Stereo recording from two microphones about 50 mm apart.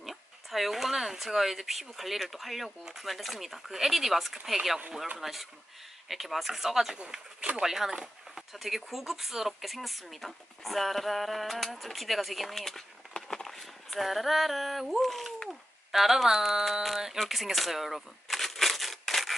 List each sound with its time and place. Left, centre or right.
0.0 s speech: centre
7.0 s speech: right
7.6 s speech: centre
13.1 s a sound: centre
15.9 s speech: centre
17.2 s crumpling: centre